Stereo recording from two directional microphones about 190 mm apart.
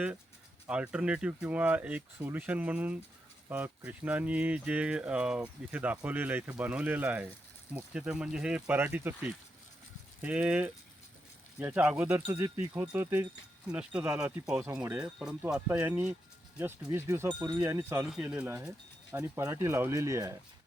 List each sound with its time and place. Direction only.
0.7 s speech: 5° right (ahead or behind)